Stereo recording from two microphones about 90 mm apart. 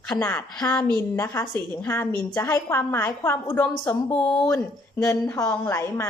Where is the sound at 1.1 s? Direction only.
30° left (ahead or behind); by 4.5 s 15° left (ahead or behind).